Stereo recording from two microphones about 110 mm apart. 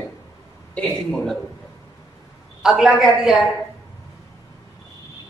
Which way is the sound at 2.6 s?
5° right (ahead or behind).